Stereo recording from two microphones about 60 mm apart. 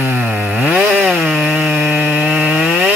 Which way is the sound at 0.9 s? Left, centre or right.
Centre.